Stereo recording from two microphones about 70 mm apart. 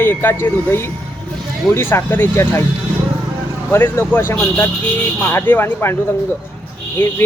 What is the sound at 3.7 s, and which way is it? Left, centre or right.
Speech, left.